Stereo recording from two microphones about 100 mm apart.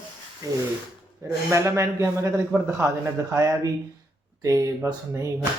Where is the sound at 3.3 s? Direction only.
30° right (ahead or behind).